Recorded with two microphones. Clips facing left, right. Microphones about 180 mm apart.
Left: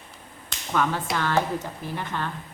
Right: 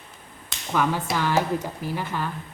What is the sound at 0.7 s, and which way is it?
A woman's voice, 10° right (ahead or behind).